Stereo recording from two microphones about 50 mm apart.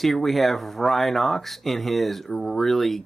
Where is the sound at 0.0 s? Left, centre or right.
Centre.